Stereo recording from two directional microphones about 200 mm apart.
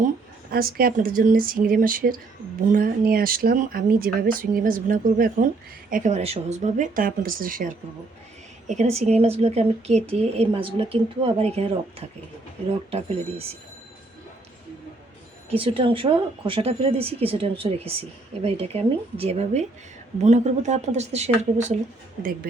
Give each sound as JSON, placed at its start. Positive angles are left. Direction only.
{"t": 0.5, "sound": "a woman's voice", "side_deg": -45}
{"t": 15.4, "sound": "a woman's voice", "side_deg": -25}
{"t": 22.2, "sound": "speech", "side_deg": -45}